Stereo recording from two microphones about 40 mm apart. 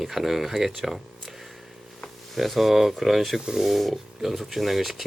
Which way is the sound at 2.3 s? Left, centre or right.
Centre.